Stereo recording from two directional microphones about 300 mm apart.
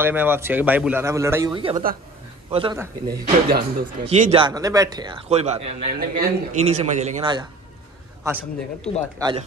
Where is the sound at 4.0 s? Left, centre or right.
Right.